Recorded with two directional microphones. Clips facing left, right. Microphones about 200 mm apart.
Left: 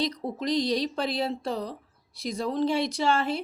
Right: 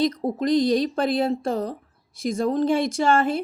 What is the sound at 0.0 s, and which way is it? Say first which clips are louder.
Speech: right 7 dB; 50° right (ahead or behind).